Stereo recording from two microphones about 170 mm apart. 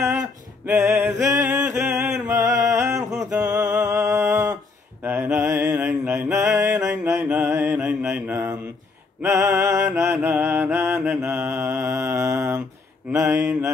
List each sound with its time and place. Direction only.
0.7 s mantra: 15° right (ahead or behind)
1.3 s music: 15° right (ahead or behind)
2.6 s a sound: 15° right (ahead or behind)
3.4 s music: 20° right (ahead or behind)
3.7 s a sound: 15° right (ahead or behind)
5.0 s mantra: 10° right (ahead or behind)